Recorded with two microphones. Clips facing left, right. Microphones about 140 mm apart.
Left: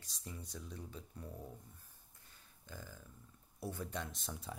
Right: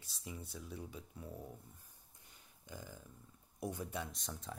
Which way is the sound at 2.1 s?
15° right (ahead or behind).